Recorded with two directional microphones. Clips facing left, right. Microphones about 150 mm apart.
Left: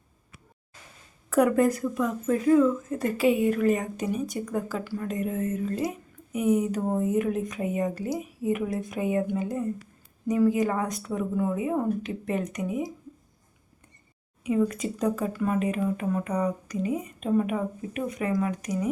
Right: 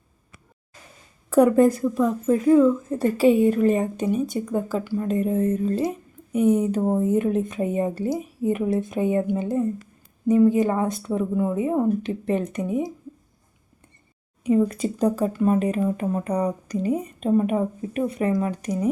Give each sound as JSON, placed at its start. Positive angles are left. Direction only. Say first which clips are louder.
{"t": 1.3, "sound": "speech", "louder": "right 5 dB", "side_deg": -30}
{"t": 14.4, "sound": "speech", "louder": "right 5 dB", "side_deg": -35}